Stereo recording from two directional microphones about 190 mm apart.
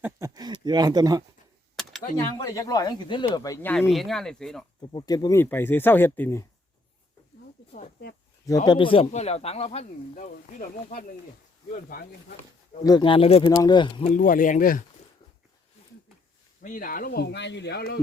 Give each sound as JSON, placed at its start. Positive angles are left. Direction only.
{"t": 0.0, "sound": "a sound", "side_deg": -20}
{"t": 2.1, "sound": "speech", "side_deg": 20}
{"t": 4.8, "sound": "speech", "side_deg": 25}
{"t": 7.7, "sound": "speech", "side_deg": 50}
{"t": 8.4, "sound": "speech", "side_deg": 20}
{"t": 12.8, "sound": "speech", "side_deg": 20}
{"t": 13.4, "sound": "speech", "side_deg": 15}
{"t": 14.1, "sound": "speech", "side_deg": 45}
{"t": 16.6, "sound": "speech", "side_deg": 45}